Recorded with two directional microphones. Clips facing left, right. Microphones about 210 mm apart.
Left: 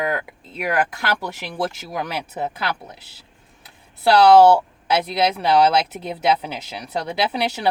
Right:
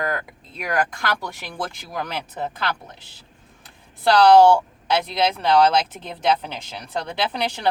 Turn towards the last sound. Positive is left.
turn(degrees=5)  # may be behind; listen again after turning